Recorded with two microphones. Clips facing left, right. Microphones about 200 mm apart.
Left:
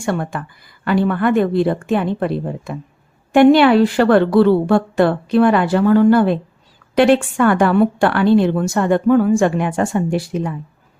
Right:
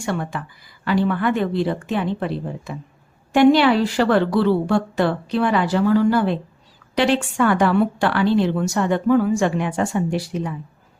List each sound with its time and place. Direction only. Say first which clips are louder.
0.0 s a woman's voice: left 4 dB; 50° left (ahead or behind)